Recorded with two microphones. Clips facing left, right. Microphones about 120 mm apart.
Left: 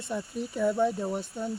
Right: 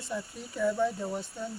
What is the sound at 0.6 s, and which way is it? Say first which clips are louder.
Speech: left 2 dB; 20° left (ahead or behind).